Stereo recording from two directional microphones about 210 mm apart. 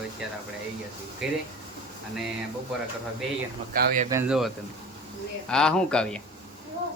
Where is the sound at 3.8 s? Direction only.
40° right (ahead or behind).